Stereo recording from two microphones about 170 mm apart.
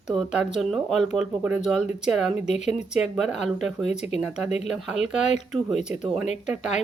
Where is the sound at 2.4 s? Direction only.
40° left (ahead or behind).